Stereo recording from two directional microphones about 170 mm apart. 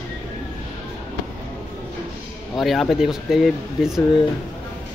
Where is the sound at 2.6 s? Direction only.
Centre (ahead or behind).